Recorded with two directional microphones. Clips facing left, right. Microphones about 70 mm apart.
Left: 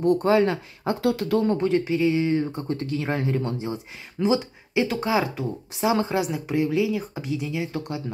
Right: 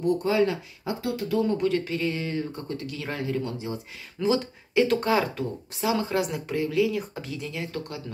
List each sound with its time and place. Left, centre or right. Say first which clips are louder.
0.0 s speech: left 4 dB; left
1.0 s speech: left 5 dB; left
1.6 s speech: left 4 dB; left
6.1 s speech: left 3 dB; centre